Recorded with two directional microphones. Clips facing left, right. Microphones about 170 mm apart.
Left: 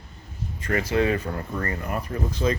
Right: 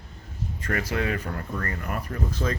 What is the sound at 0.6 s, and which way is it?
Speech, 25° left (ahead or behind).